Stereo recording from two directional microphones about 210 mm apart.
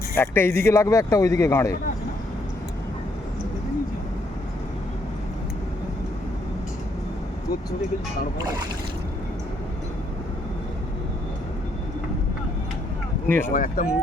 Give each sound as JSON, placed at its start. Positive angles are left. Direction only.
{"t": 0.2, "sound": "speech", "side_deg": 10}
{"t": 13.2, "sound": "speech", "side_deg": 10}
{"t": 13.5, "sound": "speech", "side_deg": 40}